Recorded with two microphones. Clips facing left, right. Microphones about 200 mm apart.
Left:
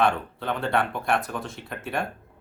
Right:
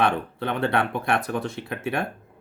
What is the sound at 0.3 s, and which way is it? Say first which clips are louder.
Speech: right 2 dB; 60° right (ahead or behind).